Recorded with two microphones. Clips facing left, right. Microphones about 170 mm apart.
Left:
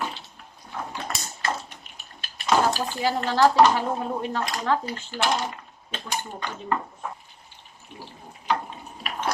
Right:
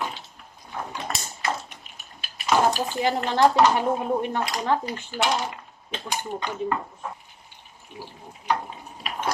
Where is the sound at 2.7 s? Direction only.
20° right (ahead or behind).